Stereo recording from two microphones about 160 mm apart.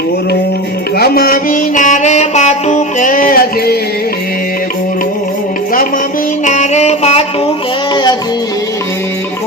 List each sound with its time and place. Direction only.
0.9 s music: 70° left (ahead or behind)
6.4 s music: 50° left (ahead or behind)